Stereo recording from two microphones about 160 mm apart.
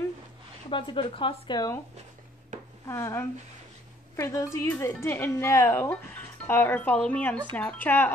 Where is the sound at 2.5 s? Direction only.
50° right (ahead or behind).